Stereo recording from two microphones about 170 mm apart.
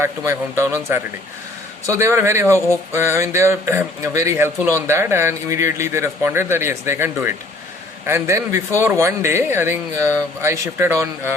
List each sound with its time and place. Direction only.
0.0 s a man's voice: 15° right (ahead or behind)